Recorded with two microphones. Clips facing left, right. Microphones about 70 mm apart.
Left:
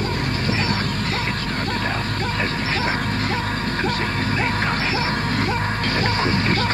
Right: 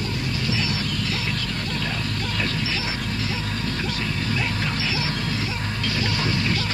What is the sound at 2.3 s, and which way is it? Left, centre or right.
Music, left.